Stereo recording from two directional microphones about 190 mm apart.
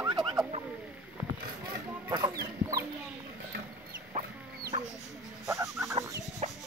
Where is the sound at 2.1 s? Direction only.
20° right (ahead or behind).